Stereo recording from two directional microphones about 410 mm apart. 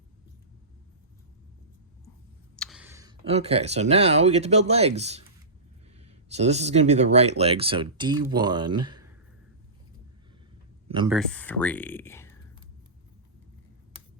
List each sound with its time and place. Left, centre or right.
2.6 s speech: centre
10.8 s speech: centre
11.2 s speech: centre